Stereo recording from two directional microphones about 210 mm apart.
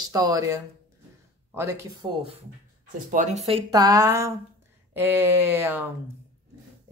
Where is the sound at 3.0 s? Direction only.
35° right (ahead or behind); by 5.8 s 10° right (ahead or behind).